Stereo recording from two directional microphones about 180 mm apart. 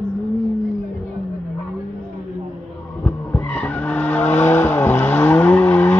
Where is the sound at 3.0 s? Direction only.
10° left (ahead or behind).